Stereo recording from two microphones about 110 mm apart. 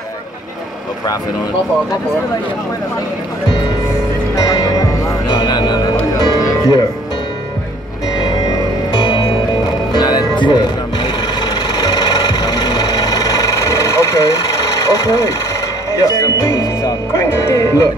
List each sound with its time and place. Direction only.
4.4 s music: 35° left (ahead or behind)
8.9 s music: 40° left (ahead or behind)
11.4 s tools: 35° left (ahead or behind)
15.9 s speech: 35° left (ahead or behind)